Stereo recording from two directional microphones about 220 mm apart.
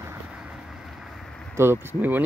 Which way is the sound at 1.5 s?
10° right (ahead or behind).